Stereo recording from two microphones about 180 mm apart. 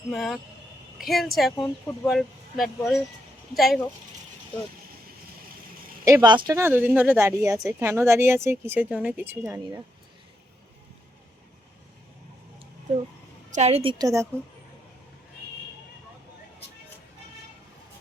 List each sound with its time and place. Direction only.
0.1 s speech: centre (ahead or behind)
6.1 s speech: 20° right (ahead or behind)
6.6 s speech: 10° right (ahead or behind)
13.5 s a woman's voice: 40° right (ahead or behind)
14.0 s speech: 15° right (ahead or behind)